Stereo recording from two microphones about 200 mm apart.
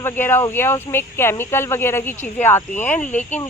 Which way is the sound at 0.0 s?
10° left (ahead or behind).